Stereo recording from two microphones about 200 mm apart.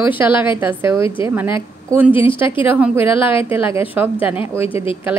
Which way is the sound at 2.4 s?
10° right (ahead or behind).